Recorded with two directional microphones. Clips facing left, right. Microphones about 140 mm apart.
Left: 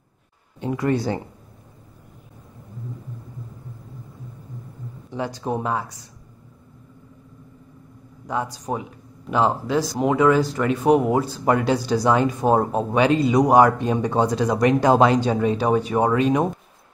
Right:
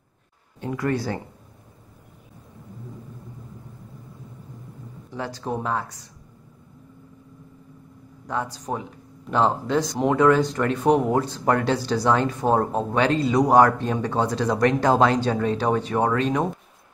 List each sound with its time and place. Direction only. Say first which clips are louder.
0.6 s speech: left 3 dB; 20° left (ahead or behind)
5.1 s speech: left 3 dB; 15° left (ahead or behind)
8.3 s speech: left 2 dB; 10° left (ahead or behind)